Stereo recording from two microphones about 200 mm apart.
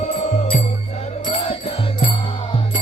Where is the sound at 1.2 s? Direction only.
25° left (ahead or behind).